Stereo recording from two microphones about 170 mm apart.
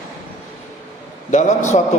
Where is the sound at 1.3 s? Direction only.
45° left (ahead or behind).